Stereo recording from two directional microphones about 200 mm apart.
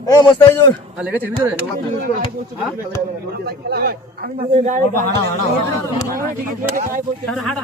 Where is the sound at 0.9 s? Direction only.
10° right (ahead or behind).